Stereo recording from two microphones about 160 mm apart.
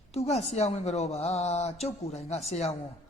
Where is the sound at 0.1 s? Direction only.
40° left (ahead or behind).